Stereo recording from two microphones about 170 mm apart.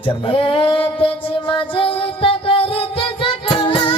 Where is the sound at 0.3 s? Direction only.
30° left (ahead or behind).